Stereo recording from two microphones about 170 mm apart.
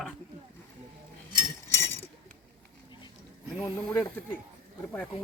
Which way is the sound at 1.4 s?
15° left (ahead or behind).